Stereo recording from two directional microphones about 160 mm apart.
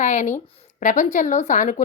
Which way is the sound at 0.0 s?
45° left (ahead or behind).